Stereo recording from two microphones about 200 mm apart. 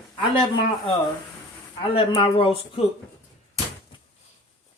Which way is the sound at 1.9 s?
30° left (ahead or behind).